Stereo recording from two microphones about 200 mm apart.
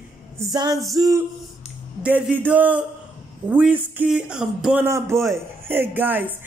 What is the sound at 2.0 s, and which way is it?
A man's voice, 5° right (ahead or behind).